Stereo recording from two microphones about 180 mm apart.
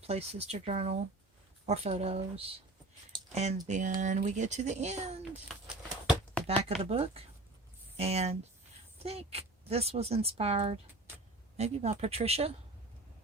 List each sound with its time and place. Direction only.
0.1 s speech: 35° right (ahead or behind)
5.6 s a sound: centre (ahead or behind)
6.5 s speech: 35° right (ahead or behind)